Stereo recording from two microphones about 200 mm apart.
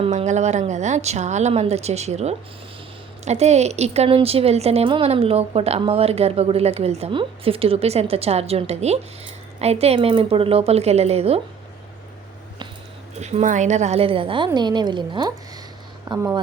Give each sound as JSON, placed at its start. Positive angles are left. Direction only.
{"t": 0.0, "sound": "speech", "side_deg": -30}
{"t": 13.1, "sound": "a woman's voice", "side_deg": -35}